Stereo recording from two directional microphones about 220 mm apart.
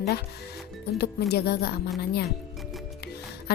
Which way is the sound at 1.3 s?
45° left (ahead or behind).